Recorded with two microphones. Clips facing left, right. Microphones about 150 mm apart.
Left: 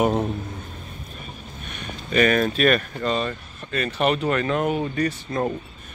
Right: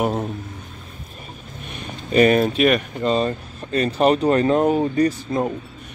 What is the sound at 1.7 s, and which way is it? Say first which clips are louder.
Speech: right 4 dB; 30° right (ahead or behind).